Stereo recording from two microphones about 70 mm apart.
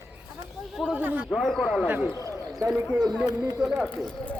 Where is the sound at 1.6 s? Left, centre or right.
Centre.